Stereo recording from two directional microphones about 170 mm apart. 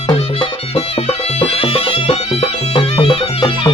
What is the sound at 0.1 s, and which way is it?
Music, 30° left (ahead or behind).